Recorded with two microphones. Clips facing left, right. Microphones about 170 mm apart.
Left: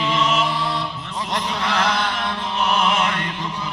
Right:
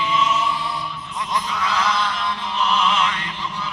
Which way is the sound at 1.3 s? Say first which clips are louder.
Even; 75° left (ahead or behind).